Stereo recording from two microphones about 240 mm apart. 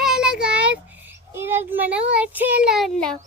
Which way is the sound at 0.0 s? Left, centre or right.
Centre.